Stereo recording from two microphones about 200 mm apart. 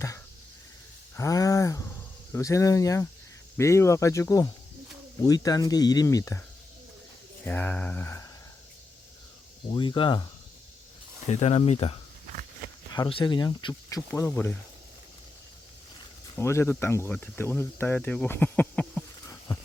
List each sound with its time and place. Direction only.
1.1 s a sound: 15° left (ahead or behind)
2.3 s speech: 15° left (ahead or behind)
7.4 s speech: 10° left (ahead or behind)
9.6 s speech: 25° left (ahead or behind)
11.3 s speech: 30° left (ahead or behind)
14.1 s speech: 10° left (ahead or behind)
16.3 s speech: 15° left (ahead or behind)